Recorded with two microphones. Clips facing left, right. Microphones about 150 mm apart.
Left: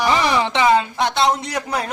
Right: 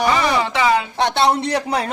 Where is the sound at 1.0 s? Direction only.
35° right (ahead or behind).